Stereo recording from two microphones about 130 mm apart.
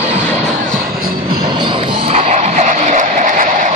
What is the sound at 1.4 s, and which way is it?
Music, 35° right (ahead or behind).